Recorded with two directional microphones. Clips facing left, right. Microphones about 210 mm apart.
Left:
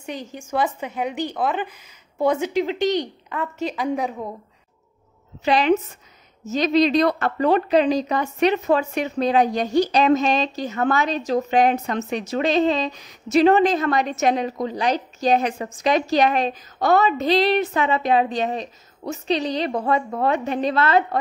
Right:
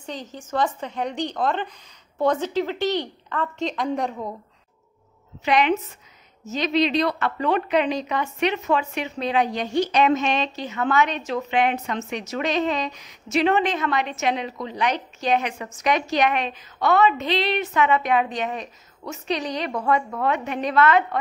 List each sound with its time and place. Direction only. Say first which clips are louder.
0.0 s a woman's voice: left 2 dB; 10° left (ahead or behind)
5.4 s a woman's voice: left 2 dB; 35° left (ahead or behind)